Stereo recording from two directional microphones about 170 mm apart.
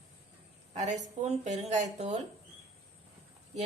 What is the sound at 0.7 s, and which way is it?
A woman's voice, 40° right (ahead or behind).